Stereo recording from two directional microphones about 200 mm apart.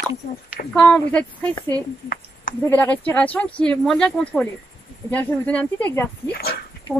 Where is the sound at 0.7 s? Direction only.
5° left (ahead or behind).